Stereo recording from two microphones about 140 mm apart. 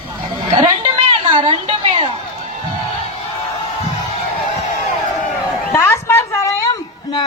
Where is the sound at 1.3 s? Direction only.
35° right (ahead or behind).